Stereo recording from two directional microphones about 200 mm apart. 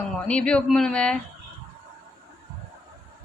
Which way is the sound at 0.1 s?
5° left (ahead or behind).